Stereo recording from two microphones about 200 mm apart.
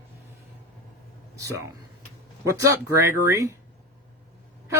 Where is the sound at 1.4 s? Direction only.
15° right (ahead or behind).